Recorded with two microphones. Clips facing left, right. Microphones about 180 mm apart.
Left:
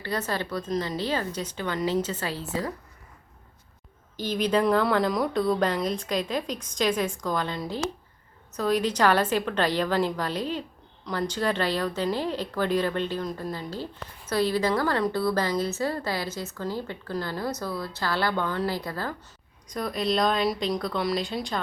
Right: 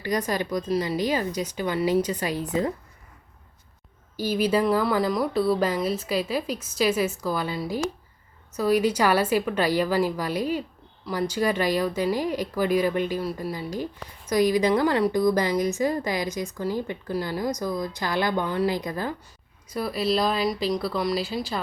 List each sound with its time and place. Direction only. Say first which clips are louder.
0.0 s a woman's voice: right 4 dB; 15° right (ahead or behind)
4.2 s a woman's voice: right 2 dB; 10° right (ahead or behind)
19.6 s speech: right 2 dB; 5° right (ahead or behind)